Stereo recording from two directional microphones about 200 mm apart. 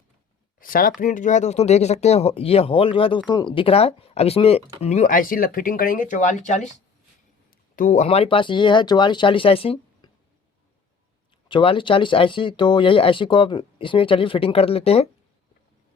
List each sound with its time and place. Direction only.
0.6 s speech: 45° left (ahead or behind)
7.8 s speech: 35° left (ahead or behind)
11.4 s speech: 25° left (ahead or behind)